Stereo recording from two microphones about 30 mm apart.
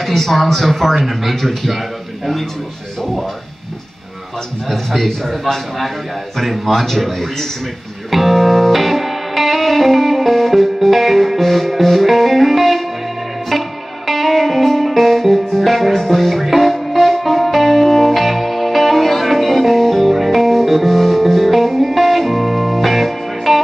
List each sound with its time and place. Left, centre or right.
0.0 s a man's voice: centre
4.6 s a man's voice: centre
8.1 s music: centre
16.4 s music: centre
16.7 s music: centre